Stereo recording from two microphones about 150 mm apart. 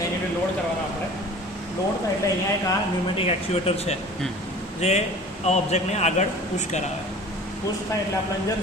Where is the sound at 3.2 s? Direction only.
45° left (ahead or behind).